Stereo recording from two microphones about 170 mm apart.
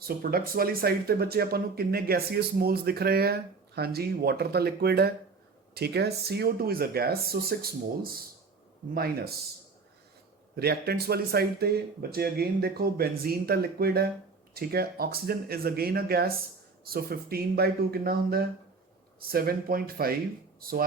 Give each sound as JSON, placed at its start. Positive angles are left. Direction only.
{"t": 0.0, "sound": "speech", "side_deg": -60}
{"t": 10.5, "sound": "speech", "side_deg": -70}